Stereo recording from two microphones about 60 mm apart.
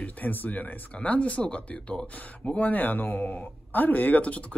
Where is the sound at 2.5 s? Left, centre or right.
Left.